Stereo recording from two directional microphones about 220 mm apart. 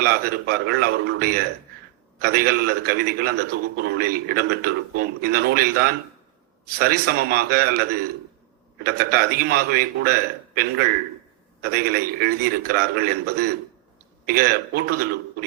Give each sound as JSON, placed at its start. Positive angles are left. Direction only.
{"t": 0.0, "sound": "a man's voice", "side_deg": -45}